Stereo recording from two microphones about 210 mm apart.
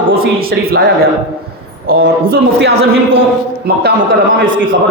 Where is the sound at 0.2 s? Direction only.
45° right (ahead or behind).